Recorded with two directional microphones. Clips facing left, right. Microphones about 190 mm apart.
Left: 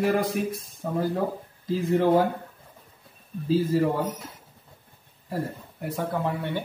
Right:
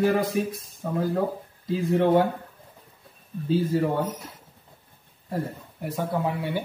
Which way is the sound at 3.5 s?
Centre (ahead or behind).